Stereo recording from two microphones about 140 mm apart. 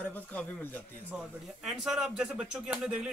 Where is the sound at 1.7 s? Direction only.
5° right (ahead or behind).